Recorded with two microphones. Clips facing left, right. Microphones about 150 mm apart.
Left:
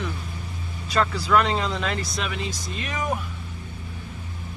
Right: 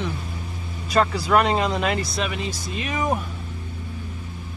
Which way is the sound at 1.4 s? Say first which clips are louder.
Right 4 dB; 55° right (ahead or behind).